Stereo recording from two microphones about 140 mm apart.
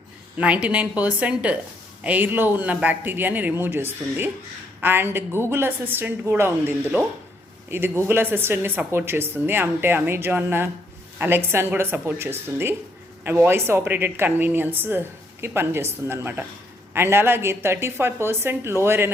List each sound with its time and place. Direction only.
0.3 s speech: 10° right (ahead or behind)